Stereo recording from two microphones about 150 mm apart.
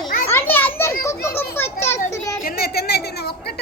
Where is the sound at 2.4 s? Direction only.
85° left.